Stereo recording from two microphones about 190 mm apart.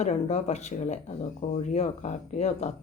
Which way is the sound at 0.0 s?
35° left (ahead or behind).